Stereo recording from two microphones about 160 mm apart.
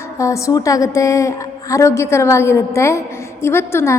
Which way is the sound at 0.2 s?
20° left (ahead or behind).